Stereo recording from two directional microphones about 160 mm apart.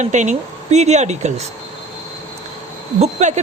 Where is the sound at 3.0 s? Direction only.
45° right (ahead or behind).